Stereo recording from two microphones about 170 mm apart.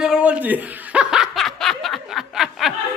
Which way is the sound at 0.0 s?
5° right (ahead or behind).